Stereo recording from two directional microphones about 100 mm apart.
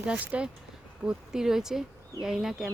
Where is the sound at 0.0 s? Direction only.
10° right (ahead or behind).